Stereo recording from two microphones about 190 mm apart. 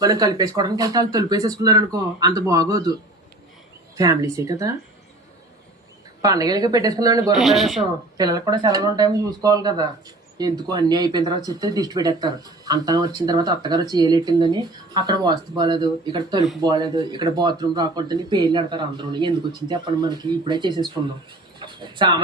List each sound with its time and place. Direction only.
0.0 s speech: 20° right (ahead or behind)
3.9 s speech: 20° right (ahead or behind)
6.2 s speech: 20° right (ahead or behind)
7.3 s speech: centre (ahead or behind)
8.2 s speech: 20° right (ahead or behind)